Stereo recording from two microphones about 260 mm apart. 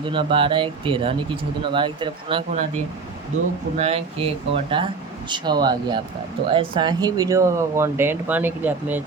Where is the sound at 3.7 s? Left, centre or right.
Right.